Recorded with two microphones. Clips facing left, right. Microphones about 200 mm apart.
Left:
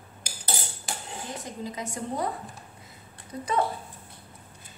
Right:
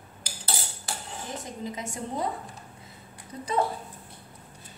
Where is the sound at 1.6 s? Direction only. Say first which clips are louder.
Left 2 dB; 25° right (ahead or behind).